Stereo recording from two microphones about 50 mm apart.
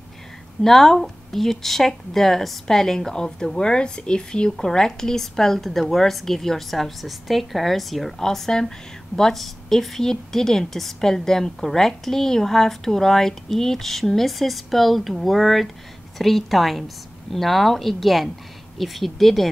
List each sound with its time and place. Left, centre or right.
0.6 s a woman's voice: centre